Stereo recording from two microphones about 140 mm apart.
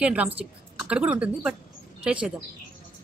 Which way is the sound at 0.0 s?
10° right (ahead or behind).